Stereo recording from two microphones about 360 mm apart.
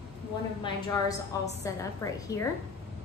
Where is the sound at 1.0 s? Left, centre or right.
Centre.